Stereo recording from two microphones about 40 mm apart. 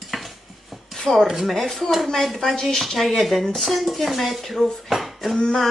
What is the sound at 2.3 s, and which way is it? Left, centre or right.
Speech, centre.